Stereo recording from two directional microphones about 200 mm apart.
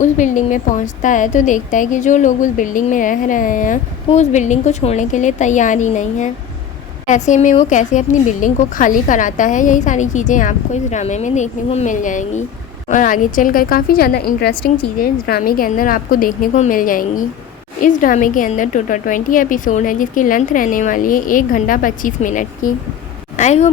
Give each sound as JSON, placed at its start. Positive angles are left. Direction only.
{"t": 0.0, "sound": "a woman's voice", "side_deg": 40}